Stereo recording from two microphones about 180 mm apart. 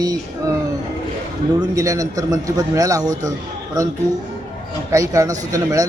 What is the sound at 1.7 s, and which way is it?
Speech, 20° right (ahead or behind).